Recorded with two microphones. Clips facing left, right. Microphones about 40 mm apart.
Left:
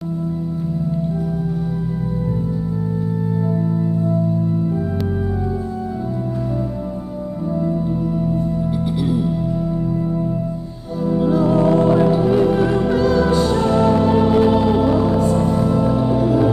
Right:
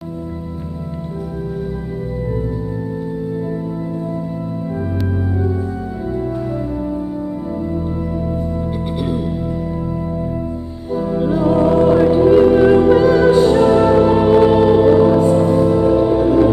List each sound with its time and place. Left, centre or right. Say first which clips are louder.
9.0 s music: left 1 dB; centre
11.1 s music: even; centre